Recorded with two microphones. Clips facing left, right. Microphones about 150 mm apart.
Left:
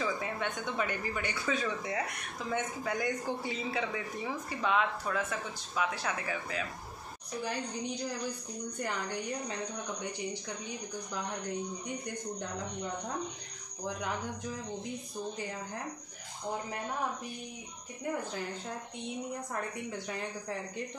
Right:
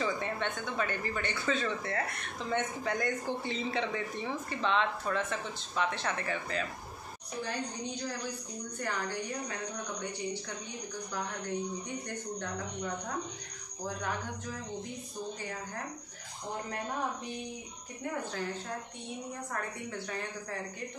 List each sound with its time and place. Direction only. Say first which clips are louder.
0.0 s a sound: right 1 dB; 5° left (ahead or behind)
0.7 s a woman's voice: even; 15° left (ahead or behind)
8.8 s a woman's voice: right 1 dB; 15° left (ahead or behind)